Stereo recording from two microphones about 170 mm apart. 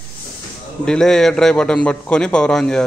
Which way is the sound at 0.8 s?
5° left (ahead or behind).